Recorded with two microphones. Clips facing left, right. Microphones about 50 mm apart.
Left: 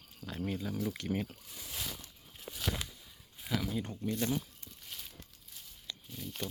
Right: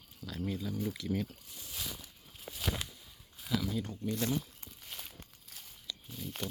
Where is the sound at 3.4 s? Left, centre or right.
Left.